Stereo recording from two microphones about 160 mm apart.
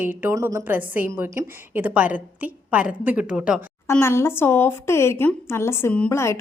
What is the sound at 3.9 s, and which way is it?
A woman's voice, 15° left (ahead or behind).